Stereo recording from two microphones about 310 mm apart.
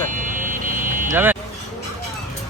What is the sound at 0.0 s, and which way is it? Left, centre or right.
Vehicle, right.